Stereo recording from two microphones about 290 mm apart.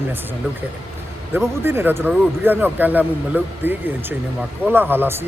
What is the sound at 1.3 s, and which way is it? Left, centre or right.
Speech, centre.